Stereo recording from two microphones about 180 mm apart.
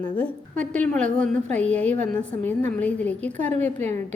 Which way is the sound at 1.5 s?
5° left (ahead or behind).